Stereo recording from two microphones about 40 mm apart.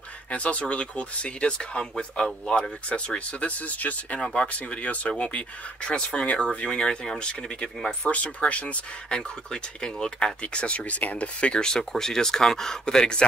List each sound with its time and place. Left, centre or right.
0.3 s speech: left
2.9 s speech: left
4.2 s speech: left
8.0 s speech: left
9.1 s speech: centre